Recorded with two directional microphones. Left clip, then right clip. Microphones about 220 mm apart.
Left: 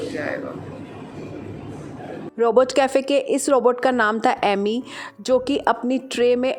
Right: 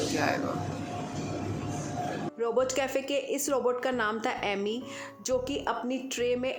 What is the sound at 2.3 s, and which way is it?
A woman's voice, 35° left (ahead or behind).